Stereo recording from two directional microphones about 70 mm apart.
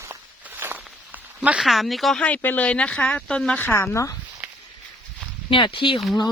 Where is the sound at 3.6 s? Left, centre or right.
Left.